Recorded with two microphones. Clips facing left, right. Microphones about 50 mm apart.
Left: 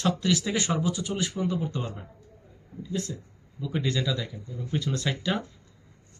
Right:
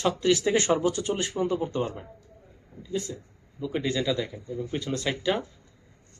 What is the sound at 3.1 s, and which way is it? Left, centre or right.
Speech, centre.